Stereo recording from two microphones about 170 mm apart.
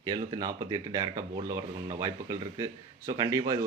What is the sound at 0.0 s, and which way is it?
Speech, 25° right (ahead or behind).